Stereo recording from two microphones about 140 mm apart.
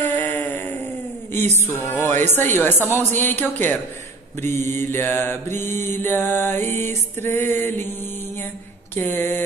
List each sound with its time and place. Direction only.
0.0 s a sound: 15° left (ahead or behind)
1.7 s mantra: 15° left (ahead or behind)
8.9 s mantra: 15° left (ahead or behind)